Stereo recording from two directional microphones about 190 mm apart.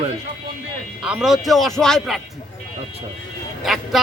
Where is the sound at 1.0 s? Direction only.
5° right (ahead or behind).